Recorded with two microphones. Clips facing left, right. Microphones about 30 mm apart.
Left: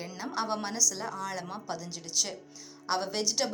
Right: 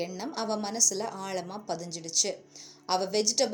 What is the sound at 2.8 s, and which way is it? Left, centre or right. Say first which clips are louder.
Speech: right 3 dB; centre.